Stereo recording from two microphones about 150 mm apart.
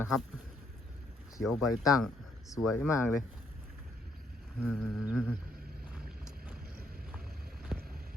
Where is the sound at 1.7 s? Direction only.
25° left (ahead or behind).